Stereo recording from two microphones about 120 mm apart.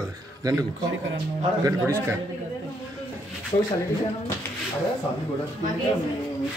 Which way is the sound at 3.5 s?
60° left (ahead or behind).